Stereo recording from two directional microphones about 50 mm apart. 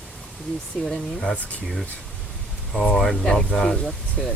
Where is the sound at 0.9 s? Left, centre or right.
Centre.